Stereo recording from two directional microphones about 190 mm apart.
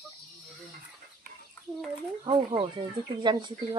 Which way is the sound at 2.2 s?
25° right (ahead or behind).